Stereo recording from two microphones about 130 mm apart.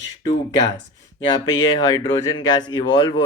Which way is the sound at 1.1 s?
35° left (ahead or behind).